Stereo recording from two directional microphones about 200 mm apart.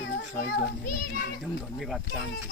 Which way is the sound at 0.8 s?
50° left (ahead or behind).